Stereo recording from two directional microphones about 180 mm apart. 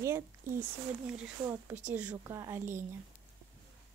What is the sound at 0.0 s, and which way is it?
Speech, 15° right (ahead or behind).